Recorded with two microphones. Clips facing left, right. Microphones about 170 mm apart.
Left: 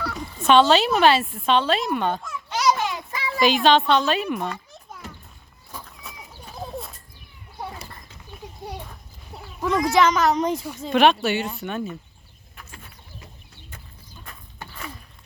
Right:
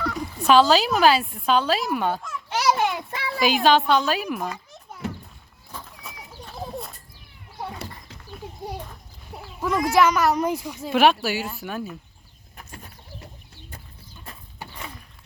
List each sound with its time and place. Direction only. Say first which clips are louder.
0.0 s speech: right 1 dB; centre (ahead or behind)
2.6 s a sound: even; 60° right (ahead or behind)
3.4 s speech: left 1 dB; 5° right (ahead or behind)
5.7 s horse: even; centre (ahead or behind)
9.3 s speech: left 2 dB; 5° right (ahead or behind)
12.5 s bird: right 2 dB; 45° right (ahead or behind)